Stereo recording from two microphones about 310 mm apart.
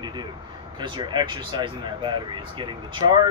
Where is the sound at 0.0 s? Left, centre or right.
Centre.